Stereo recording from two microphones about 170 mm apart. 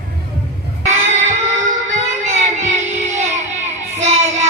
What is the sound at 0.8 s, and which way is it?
Child singing, 45° right (ahead or behind).